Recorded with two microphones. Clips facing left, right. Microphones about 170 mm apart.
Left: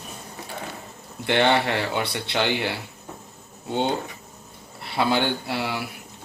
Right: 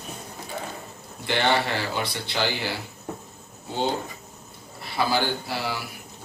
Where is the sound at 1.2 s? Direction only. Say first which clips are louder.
Left 3 dB; 60° left (ahead or behind).